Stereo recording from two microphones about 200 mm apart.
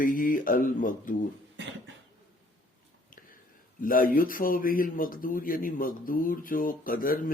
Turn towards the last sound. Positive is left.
turn(degrees=45)  # may be behind; listen again after turning